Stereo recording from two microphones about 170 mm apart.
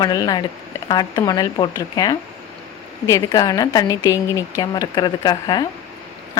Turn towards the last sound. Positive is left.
turn(degrees=25)  # may be behind; listen again after turning